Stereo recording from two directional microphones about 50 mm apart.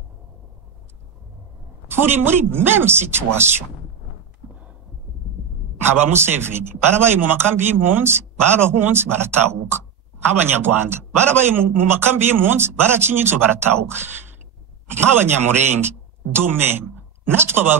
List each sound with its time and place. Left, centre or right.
1.9 s speech: right
5.9 s speech: right
16.3 s speech: right